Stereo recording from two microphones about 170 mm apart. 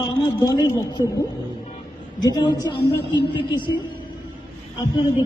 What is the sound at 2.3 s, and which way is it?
Speech, 25° left (ahead or behind).